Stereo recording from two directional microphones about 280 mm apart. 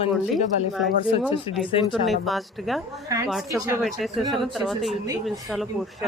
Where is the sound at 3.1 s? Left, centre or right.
Centre.